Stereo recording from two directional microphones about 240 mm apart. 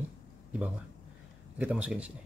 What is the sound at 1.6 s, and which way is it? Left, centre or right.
Speech, centre.